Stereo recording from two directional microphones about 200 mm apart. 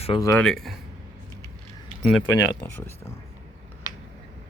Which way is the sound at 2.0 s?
5° left (ahead or behind).